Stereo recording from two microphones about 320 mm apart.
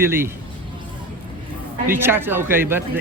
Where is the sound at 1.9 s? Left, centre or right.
Centre.